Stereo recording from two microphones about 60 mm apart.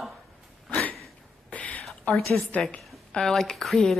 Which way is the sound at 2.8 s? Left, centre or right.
Centre.